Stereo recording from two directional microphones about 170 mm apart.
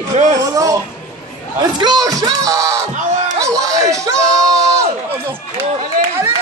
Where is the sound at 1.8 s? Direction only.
25° right (ahead or behind).